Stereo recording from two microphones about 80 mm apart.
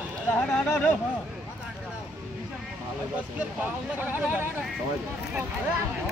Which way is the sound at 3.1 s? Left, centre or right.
Centre.